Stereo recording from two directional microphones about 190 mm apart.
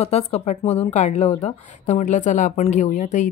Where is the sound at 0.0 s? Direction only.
35° left (ahead or behind).